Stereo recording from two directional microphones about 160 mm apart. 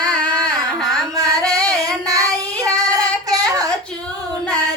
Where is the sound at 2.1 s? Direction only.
20° right (ahead or behind).